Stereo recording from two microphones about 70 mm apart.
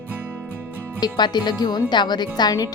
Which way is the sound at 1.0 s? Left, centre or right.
Left.